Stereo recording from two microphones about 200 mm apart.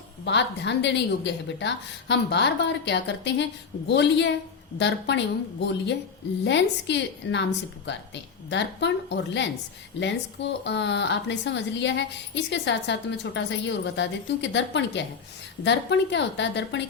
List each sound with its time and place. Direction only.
0.3 s a woman's voice: 60° left (ahead or behind)
10.6 s a woman's voice: 60° left (ahead or behind)